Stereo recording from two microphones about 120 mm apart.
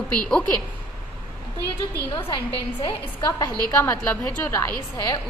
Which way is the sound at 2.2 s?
45° left (ahead or behind).